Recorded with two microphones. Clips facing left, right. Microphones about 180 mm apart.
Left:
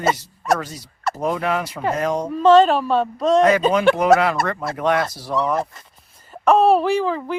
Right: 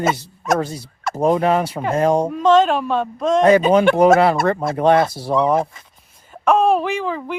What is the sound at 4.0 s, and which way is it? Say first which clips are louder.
Speech: right 3 dB; 30° right (ahead or behind).